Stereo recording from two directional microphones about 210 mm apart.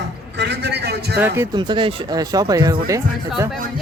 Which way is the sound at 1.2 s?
10° right (ahead or behind).